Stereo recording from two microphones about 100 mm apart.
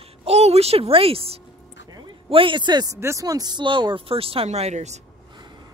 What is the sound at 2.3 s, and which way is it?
Speech, 60° right (ahead or behind).